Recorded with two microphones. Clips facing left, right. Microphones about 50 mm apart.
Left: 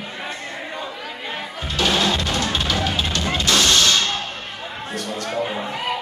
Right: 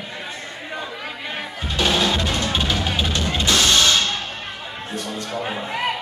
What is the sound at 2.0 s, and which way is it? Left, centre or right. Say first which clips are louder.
Music: even; right.